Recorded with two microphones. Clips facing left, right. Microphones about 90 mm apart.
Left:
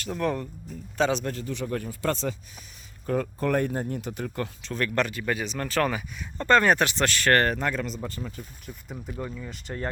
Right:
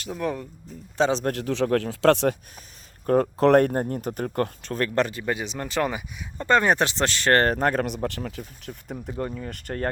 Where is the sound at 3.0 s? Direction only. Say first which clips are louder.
Right 7 dB; 45° right (ahead or behind).